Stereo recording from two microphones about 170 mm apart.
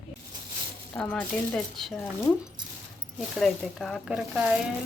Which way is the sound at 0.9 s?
5° left (ahead or behind).